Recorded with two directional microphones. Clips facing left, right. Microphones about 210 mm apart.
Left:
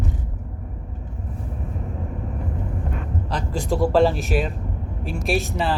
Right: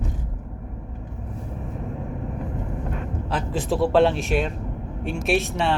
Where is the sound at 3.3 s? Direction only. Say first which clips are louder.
Even; 5° right (ahead or behind).